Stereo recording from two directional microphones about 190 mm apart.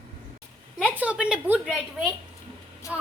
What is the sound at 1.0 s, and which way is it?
A woman's voice, 5° right (ahead or behind).